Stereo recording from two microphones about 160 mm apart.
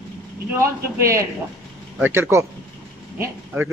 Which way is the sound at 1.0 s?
20° right (ahead or behind).